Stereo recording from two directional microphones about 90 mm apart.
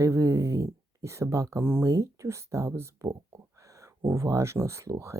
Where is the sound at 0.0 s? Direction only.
35° right (ahead or behind).